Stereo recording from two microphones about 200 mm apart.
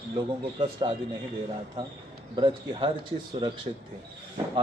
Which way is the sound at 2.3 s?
25° right (ahead or behind).